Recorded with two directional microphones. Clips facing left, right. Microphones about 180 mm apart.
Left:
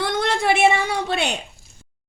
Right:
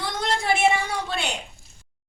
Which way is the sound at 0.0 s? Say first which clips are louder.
Left 5 dB; 65° left (ahead or behind).